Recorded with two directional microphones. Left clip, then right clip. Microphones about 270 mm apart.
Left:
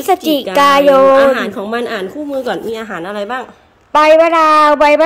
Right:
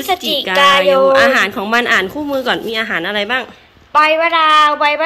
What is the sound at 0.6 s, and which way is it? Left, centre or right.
Speech, left.